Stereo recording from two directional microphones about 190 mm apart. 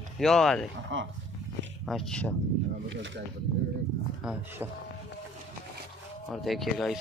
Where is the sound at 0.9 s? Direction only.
85° right.